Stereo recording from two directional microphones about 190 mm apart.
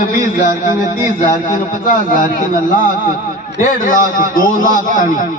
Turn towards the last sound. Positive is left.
turn(degrees=45)  # may be behind; listen again after turning